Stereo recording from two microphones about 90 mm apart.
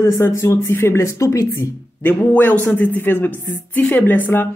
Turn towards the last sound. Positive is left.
turn(degrees=20)  # may be behind; listen again after turning